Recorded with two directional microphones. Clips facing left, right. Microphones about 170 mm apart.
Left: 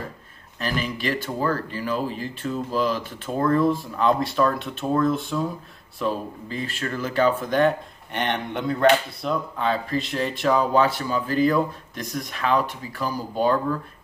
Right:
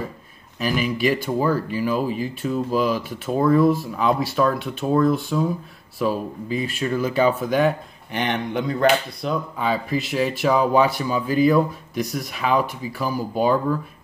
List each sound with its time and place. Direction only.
0.6 s speech: 10° right (ahead or behind)